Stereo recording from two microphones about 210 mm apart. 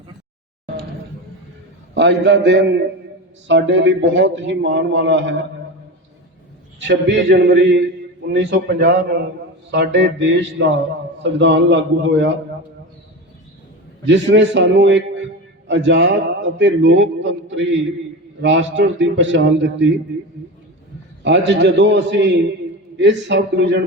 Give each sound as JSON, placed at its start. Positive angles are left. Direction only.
{"t": 2.0, "sound": "a man's voice", "side_deg": -55}
{"t": 6.7, "sound": "a man's voice", "side_deg": -55}
{"t": 14.1, "sound": "a man's voice", "side_deg": -60}
{"t": 21.2, "sound": "a man's voice", "side_deg": -55}